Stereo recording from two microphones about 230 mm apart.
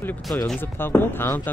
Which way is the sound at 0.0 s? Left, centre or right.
Centre.